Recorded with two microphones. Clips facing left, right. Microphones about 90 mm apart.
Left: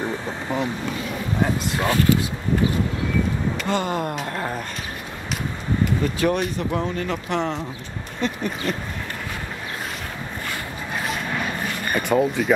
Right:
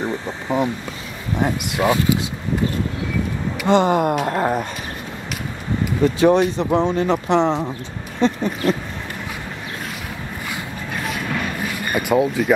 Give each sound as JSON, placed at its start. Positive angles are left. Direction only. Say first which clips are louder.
{"t": 0.0, "sound": "vehicle", "louder": "right 2 dB", "side_deg": -20}
{"t": 1.8, "sound": "speech", "louder": "right 2 dB", "side_deg": -15}
{"t": 3.6, "sound": "speech", "louder": "right 11 dB", "side_deg": -25}
{"t": 6.1, "sound": "speech", "louder": "right 7 dB", "side_deg": -25}
{"t": 11.9, "sound": "speech", "louder": "right 2 dB", "side_deg": -5}